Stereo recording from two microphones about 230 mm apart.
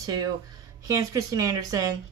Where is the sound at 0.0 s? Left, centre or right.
Centre.